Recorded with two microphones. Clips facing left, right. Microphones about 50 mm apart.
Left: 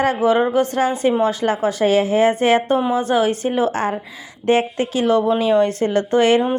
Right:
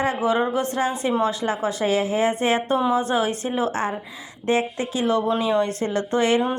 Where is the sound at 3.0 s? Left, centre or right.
Left.